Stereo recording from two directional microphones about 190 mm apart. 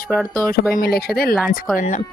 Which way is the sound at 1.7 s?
40° left (ahead or behind).